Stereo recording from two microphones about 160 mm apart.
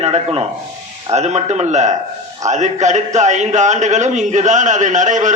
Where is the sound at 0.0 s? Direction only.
40° right (ahead or behind).